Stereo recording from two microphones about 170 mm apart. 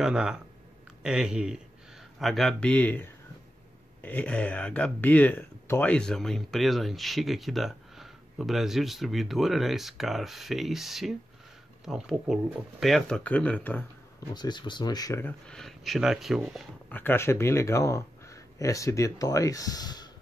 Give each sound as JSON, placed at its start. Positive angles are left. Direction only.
{"t": 0.0, "sound": "speech", "side_deg": -5}
{"t": 14.3, "sound": "speech", "side_deg": 25}
{"t": 16.9, "sound": "speech", "side_deg": 10}